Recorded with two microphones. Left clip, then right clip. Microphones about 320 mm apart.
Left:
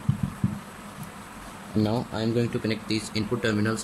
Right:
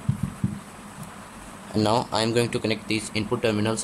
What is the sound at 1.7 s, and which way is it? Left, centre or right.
Speech, right.